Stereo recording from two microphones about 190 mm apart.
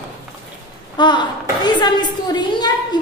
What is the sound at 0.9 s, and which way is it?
A woman's voice, 25° left (ahead or behind).